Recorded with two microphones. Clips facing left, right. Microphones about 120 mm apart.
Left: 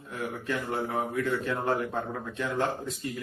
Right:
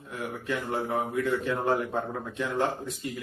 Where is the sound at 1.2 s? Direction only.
15° right (ahead or behind).